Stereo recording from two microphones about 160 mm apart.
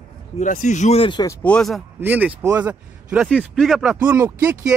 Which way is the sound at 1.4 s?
5° left (ahead or behind).